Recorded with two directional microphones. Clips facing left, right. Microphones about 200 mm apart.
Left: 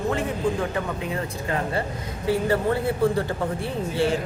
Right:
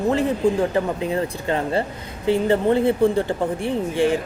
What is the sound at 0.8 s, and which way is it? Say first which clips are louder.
Speech: right 6 dB; 30° right (ahead or behind).